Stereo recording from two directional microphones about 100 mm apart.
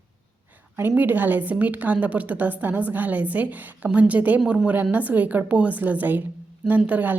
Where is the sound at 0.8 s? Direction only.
20° right (ahead or behind).